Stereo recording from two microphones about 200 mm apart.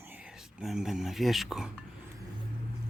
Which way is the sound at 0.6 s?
Centre (ahead or behind).